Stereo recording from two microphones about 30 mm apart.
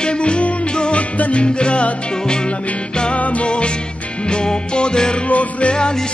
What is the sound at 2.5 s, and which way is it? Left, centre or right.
Music, left.